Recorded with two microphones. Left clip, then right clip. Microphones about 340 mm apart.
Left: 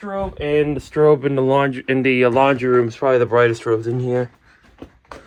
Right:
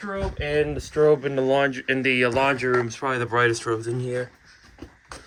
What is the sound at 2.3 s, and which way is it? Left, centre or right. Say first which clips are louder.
Speech: left 6 dB; left.